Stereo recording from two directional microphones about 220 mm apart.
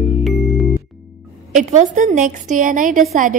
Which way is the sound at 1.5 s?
35° right (ahead or behind).